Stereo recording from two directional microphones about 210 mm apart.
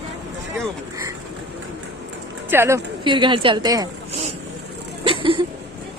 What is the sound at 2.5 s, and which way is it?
A woman's voice, 10° right (ahead or behind).